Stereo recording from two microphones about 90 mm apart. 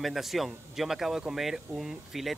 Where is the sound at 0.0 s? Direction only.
Centre (ahead or behind).